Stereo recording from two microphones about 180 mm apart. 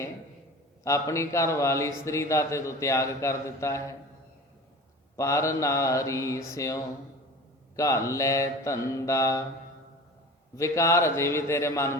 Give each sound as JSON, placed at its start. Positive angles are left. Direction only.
{"t": 0.9, "sound": "speech", "side_deg": 15}
{"t": 5.1, "sound": "speech", "side_deg": 15}
{"t": 10.5, "sound": "speech", "side_deg": 15}